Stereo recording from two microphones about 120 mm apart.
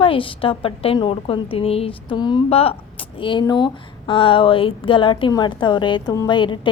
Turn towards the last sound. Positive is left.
turn(degrees=40)  # may be behind; listen again after turning